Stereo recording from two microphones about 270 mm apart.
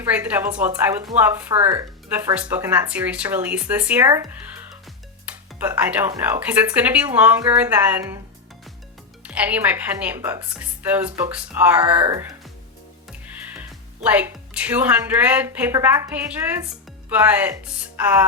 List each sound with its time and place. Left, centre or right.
0.0 s a woman's voice: centre
1.5 s speech: right
2.0 s a woman's voice: centre
9.2 s a woman's voice: centre
13.6 s speech: centre